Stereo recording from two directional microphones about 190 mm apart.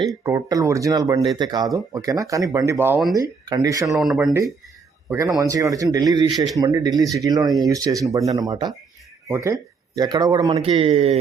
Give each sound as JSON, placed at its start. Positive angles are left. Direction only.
{"t": 0.1, "sound": "speech", "side_deg": -20}
{"t": 3.8, "sound": "speech", "side_deg": 0}
{"t": 5.0, "sound": "speech", "side_deg": -15}
{"t": 6.3, "sound": "speech", "side_deg": 0}
{"t": 6.6, "sound": "speech", "side_deg": -20}
{"t": 10.5, "sound": "a man's voice", "side_deg": -30}